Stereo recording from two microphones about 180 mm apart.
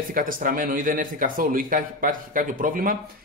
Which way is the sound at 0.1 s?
50° right (ahead or behind).